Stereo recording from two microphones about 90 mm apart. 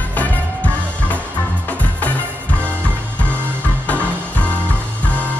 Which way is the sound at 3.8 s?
15° left (ahead or behind).